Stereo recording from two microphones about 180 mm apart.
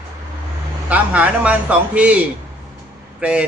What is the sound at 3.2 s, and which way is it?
Speech, 5° right (ahead or behind).